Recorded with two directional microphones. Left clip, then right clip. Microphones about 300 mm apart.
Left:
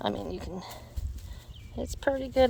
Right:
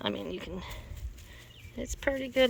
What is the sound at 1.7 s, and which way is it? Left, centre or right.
Speech, centre.